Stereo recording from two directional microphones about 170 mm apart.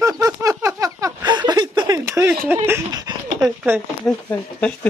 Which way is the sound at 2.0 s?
15° right (ahead or behind).